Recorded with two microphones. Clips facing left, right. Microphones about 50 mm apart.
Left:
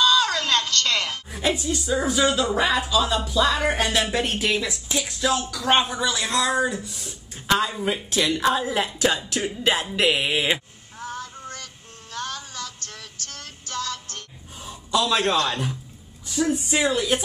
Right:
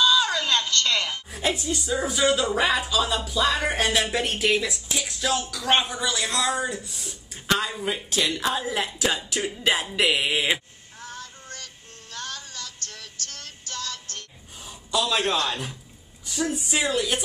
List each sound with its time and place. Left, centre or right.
0.0 s a sound: centre
1.3 s music: centre
2.0 s speech: centre
11.0 s child singing: left
14.6 s speech: centre
16.8 s speech: centre